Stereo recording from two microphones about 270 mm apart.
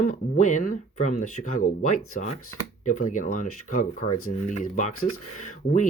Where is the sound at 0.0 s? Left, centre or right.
Left.